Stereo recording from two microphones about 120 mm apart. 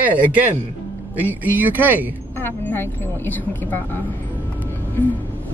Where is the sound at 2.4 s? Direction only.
15° left (ahead or behind).